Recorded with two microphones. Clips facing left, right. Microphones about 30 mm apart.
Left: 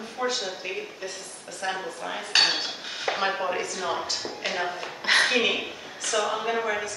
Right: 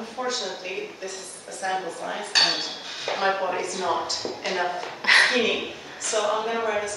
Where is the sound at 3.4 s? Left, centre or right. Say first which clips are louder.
Right 1 dB; centre.